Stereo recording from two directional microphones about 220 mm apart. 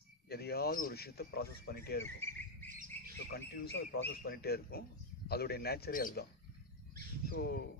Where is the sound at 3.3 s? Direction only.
45° left (ahead or behind).